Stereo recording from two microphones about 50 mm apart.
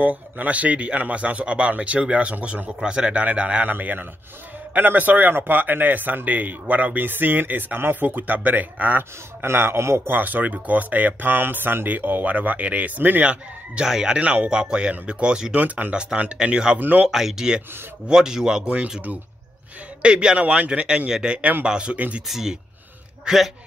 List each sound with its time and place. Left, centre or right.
0.0 s a man's voice: right
9.4 s a man's voice: right
10.0 s speech: right
13.2 s a man's voice: right
13.8 s speech: centre
14.2 s a man's voice: right
15.5 s a man's voice: right
16.7 s speech: right
17.1 s a man's voice: centre
21.9 s speech: right
22.3 s speech: centre